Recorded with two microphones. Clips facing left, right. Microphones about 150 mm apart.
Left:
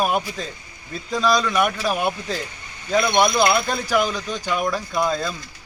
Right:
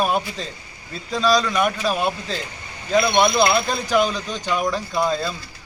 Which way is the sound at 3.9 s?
10° left (ahead or behind).